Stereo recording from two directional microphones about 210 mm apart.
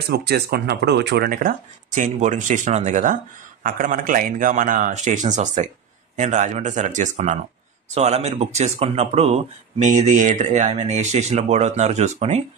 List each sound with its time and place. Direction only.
0.0 s speech: 50° right (ahead or behind); by 12.4 s 30° right (ahead or behind)